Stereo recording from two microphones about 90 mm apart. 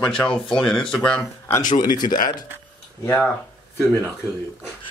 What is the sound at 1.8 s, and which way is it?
Speech, 50° left (ahead or behind).